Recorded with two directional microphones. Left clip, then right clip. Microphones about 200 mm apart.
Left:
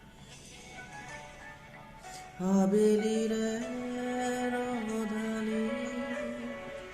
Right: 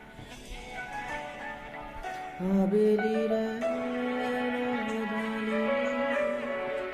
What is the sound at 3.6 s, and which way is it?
Music, 35° right (ahead or behind).